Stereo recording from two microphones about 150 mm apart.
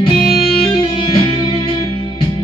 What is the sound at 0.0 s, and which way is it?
Music, 35° left (ahead or behind).